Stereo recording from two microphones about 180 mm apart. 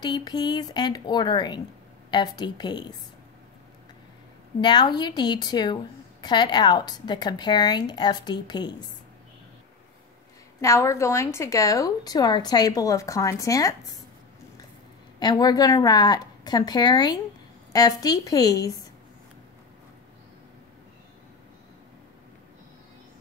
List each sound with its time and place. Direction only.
0.0 s speech: 25° left (ahead or behind)
4.6 s speech: 25° left (ahead or behind)
10.6 s a woman's voice: 15° left (ahead or behind)
15.1 s speech: 20° left (ahead or behind)